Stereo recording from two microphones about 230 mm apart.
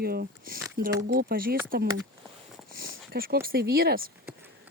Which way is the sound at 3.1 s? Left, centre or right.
Right.